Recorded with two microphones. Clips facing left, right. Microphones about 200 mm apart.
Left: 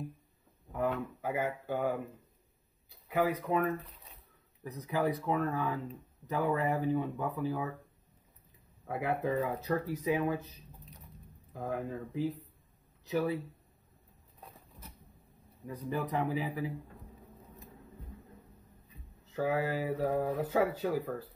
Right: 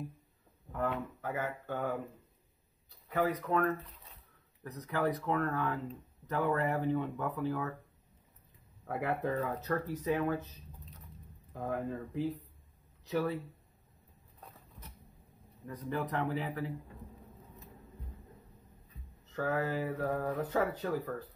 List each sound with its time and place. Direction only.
0.7 s speech: 10° left (ahead or behind)
3.1 s speech: 10° left (ahead or behind)
8.8 s speech: 5° left (ahead or behind)
11.5 s speech: 5° left (ahead or behind)
15.6 s speech: 10° left (ahead or behind)
19.3 s speech: 10° left (ahead or behind)